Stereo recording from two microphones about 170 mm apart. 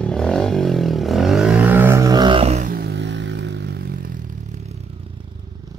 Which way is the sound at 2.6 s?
70° right (ahead or behind).